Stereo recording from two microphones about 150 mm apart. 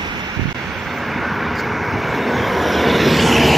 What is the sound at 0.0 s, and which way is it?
Waves, 30° right (ahead or behind).